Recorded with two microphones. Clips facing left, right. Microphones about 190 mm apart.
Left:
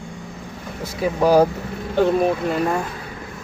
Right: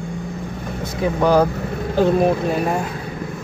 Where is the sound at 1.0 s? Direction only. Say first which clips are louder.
Left 1 dB; 5° left (ahead or behind).